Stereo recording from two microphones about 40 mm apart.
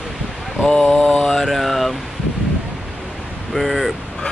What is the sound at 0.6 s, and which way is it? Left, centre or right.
Mantra, centre.